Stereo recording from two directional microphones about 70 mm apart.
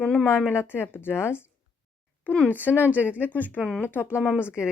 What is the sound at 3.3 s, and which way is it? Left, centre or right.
Speech, left.